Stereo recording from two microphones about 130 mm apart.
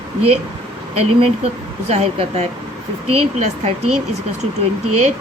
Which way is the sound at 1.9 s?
55° right (ahead or behind).